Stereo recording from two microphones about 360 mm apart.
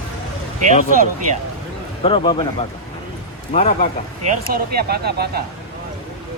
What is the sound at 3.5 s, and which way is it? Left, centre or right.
Speech, centre.